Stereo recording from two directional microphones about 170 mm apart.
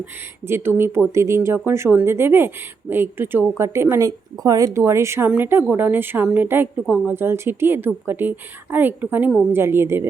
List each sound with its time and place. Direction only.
0.0 s a woman's voice: 15° right (ahead or behind)